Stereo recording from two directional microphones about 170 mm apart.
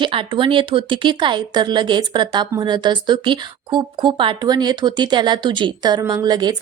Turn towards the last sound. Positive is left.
turn(degrees=-25)  # may be behind; listen again after turning